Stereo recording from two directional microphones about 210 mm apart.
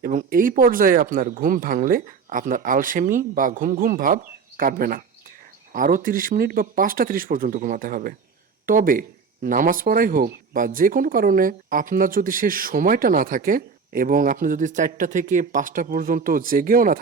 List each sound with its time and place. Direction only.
0.0 s speech: 40° right (ahead or behind)